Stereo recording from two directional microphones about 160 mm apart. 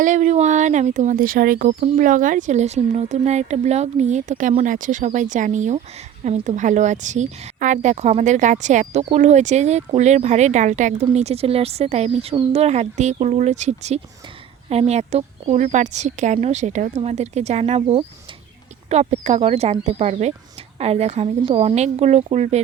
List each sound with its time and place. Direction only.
0.0 s a woman's voice: 50° right (ahead or behind)